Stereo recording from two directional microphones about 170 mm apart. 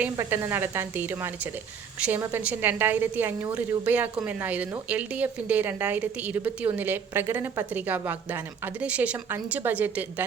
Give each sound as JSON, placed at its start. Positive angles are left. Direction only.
{"t": 0.0, "sound": "a woman's voice", "side_deg": -15}